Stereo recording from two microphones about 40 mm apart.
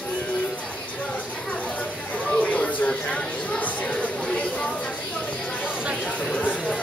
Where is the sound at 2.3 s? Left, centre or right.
Left.